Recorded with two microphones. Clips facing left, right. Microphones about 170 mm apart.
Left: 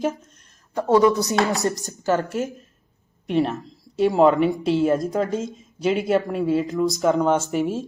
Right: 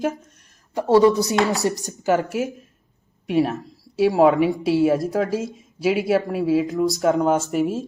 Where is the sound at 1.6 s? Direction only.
15° right (ahead or behind).